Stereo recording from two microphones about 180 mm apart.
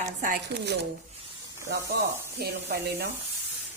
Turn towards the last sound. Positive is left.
turn(degrees=-65)  # may be behind; listen again after turning